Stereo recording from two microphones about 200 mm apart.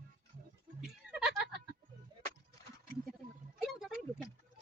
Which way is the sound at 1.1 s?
Centre (ahead or behind).